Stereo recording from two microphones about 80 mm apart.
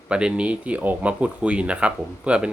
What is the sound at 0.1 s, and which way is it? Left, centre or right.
Speech, centre.